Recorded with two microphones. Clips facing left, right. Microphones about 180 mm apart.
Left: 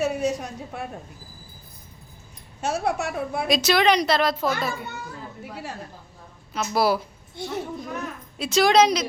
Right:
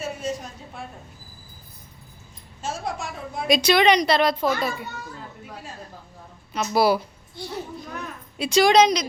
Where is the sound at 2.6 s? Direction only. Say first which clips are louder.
Left 5 dB; 70° left (ahead or behind).